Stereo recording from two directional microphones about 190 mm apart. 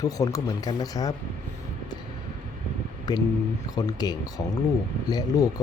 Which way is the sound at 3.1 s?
20° left (ahead or behind).